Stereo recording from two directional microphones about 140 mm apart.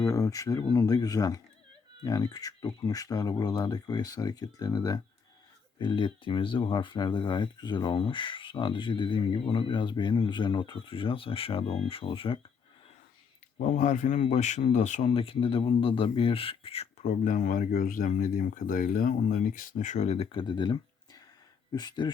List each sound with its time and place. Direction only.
0.0 s speech: 25° left (ahead or behind); by 12.4 s 40° left (ahead or behind)
13.7 s speech: 70° left (ahead or behind)
14.2 s speech: 55° left (ahead or behind)
15.1 s speech: 40° left (ahead or behind)
17.1 s speech: 70° left (ahead or behind); by 22.1 s 30° left (ahead or behind)